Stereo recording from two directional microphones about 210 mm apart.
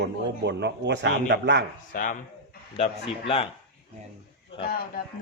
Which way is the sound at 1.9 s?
40° left (ahead or behind).